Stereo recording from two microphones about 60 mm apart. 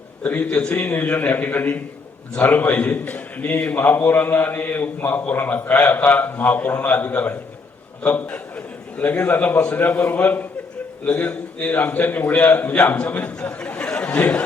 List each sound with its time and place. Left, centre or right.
0.2 s a man's voice: left